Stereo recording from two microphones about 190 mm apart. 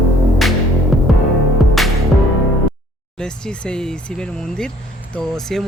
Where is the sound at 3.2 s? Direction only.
5° left (ahead or behind).